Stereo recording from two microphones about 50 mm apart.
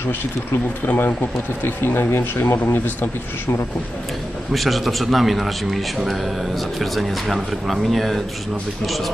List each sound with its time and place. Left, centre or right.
0.5 s speech: left
4.5 s speech: centre